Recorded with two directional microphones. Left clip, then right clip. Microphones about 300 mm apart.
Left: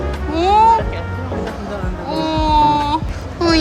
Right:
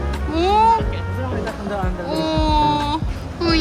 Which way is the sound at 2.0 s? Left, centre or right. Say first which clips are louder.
Left 4 dB; centre.